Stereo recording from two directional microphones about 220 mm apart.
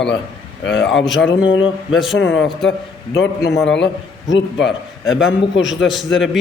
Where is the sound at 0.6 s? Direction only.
55° left (ahead or behind).